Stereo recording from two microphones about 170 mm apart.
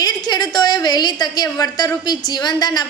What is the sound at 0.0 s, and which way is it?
A man's voice, 25° left (ahead or behind).